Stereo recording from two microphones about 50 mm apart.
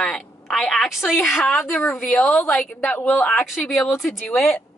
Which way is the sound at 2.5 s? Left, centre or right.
Centre.